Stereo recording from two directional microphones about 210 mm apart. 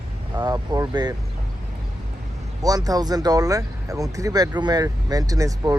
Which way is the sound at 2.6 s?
15° right (ahead or behind).